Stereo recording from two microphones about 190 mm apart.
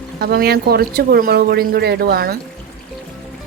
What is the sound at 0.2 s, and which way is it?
Speech, 55° right (ahead or behind).